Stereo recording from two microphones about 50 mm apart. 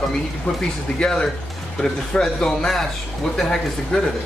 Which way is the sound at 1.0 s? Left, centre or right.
Centre.